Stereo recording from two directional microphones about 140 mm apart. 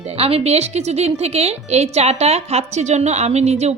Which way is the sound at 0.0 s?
45° right (ahead or behind).